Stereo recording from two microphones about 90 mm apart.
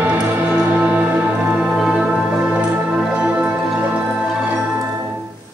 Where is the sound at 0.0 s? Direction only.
20° right (ahead or behind).